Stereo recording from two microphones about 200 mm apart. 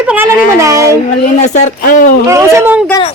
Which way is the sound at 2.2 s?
15° right (ahead or behind).